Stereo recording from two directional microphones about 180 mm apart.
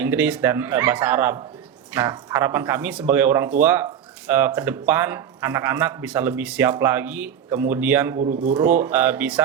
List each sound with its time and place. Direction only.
0.0 s speech: 10° right (ahead or behind)
8.2 s speech: 45° right (ahead or behind)
8.6 s speech: 10° right (ahead or behind)